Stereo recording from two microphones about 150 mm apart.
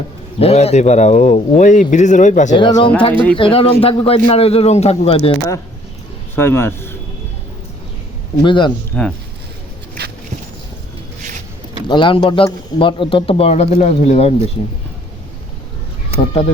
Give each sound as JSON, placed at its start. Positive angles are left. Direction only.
{"t": 0.3, "sound": "a man's voice", "side_deg": 45}
{"t": 2.6, "sound": "speech", "side_deg": 30}
{"t": 6.3, "sound": "a man's voice", "side_deg": 15}
{"t": 8.4, "sound": "speech", "side_deg": 30}
{"t": 8.9, "sound": "speech", "side_deg": 10}
{"t": 11.9, "sound": "speech", "side_deg": 35}
{"t": 16.2, "sound": "speech", "side_deg": 40}